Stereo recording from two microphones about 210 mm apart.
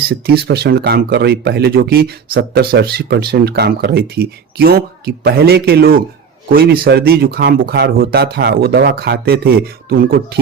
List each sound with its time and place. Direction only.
0.1 s speech: 50° right (ahead or behind)